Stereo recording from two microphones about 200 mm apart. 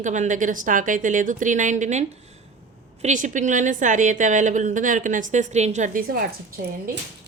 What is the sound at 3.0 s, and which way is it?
A woman's voice, 40° right (ahead or behind).